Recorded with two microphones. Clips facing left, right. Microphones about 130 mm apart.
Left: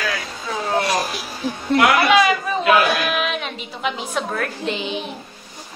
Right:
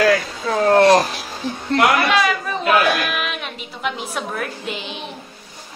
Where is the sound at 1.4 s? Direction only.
10° left (ahead or behind).